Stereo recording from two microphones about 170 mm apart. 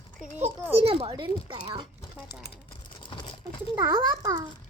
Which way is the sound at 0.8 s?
35° right (ahead or behind).